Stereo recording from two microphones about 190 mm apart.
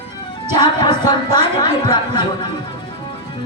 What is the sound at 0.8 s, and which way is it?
Speech, 25° left (ahead or behind).